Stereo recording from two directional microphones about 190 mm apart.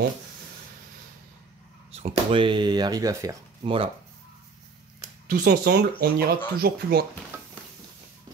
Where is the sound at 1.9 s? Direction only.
30° right (ahead or behind); by 3.4 s 15° right (ahead or behind).